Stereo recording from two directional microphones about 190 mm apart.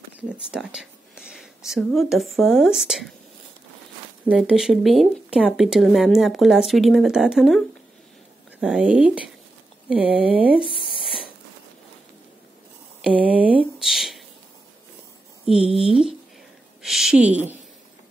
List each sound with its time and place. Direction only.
0.3 s speech: 5° right (ahead or behind)
4.3 s speech: 5° right (ahead or behind)
9.8 s a sound: 5° right (ahead or behind)
13.0 s speech: 5° right (ahead or behind)
13.7 s a sound: centre (ahead or behind)
15.6 s speech: 30° right (ahead or behind)
16.8 s a woman's voice: centre (ahead or behind)